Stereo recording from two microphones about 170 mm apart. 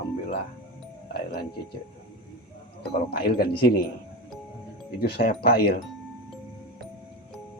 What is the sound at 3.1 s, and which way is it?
Speech, 65° left (ahead or behind).